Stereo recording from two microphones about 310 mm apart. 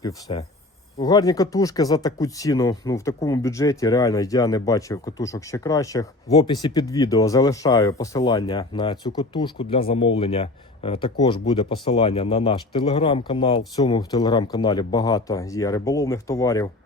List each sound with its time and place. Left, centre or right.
0.0 s speech: centre